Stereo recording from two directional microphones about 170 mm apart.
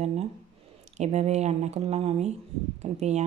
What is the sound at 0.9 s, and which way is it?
Speech, 40° right (ahead or behind).